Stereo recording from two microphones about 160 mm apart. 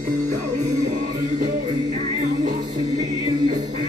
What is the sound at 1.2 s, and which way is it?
Music, 55° right (ahead or behind).